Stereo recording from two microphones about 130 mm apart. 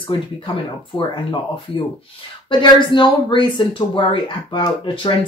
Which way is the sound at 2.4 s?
35° left (ahead or behind).